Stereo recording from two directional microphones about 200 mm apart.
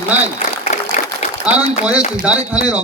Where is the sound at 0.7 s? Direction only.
35° left (ahead or behind).